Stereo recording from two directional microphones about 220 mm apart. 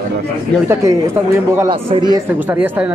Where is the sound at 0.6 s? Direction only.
15° right (ahead or behind).